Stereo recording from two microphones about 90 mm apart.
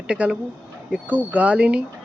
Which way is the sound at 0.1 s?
10° right (ahead or behind).